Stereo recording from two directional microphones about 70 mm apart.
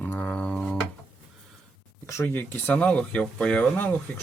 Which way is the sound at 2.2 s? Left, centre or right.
Left.